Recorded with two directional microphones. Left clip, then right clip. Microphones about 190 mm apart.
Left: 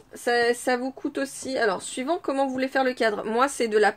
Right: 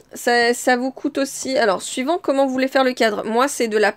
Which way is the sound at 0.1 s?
45° right (ahead or behind).